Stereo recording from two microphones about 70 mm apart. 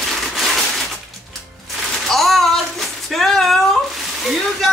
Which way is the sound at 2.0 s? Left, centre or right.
Centre.